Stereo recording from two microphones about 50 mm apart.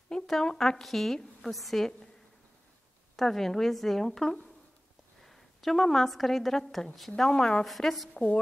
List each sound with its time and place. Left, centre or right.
0.3 s a woman's voice: centre
3.2 s a woman's voice: centre
7.6 s a woman's voice: centre
8.1 s a woman's voice: left